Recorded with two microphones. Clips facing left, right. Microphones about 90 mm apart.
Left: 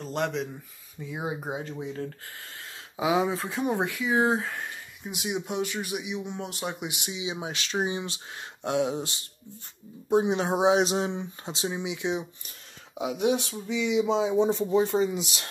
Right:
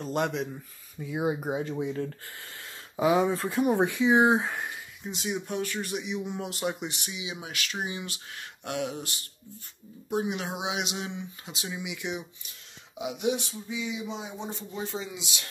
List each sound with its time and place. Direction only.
0.0 s speech: 5° right (ahead or behind)
3.0 s speech: 5° left (ahead or behind)
3.8 s speech: 20° right (ahead or behind)
5.0 s speech: 10° left (ahead or behind)
6.9 s speech: 15° left (ahead or behind)
7.2 s speech: 25° left (ahead or behind)
12.4 s speech: 40° left (ahead or behind)
13.5 s speech: 75° left (ahead or behind)